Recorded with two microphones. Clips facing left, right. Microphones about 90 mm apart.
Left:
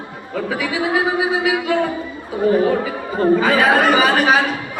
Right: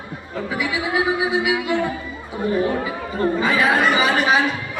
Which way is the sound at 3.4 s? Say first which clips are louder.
Left 3 dB; 50° left (ahead or behind).